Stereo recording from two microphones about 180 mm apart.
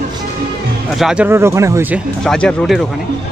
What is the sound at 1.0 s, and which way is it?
Speech, 5° right (ahead or behind).